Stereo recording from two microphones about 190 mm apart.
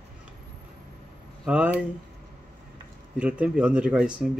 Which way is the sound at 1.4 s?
5° right (ahead or behind).